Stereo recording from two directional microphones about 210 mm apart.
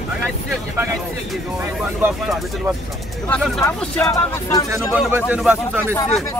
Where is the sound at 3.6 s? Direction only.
5° left (ahead or behind).